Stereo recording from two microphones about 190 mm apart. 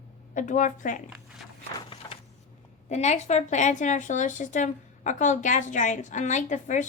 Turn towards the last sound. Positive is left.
turn(degrees=40)  # may be behind; listen again after turning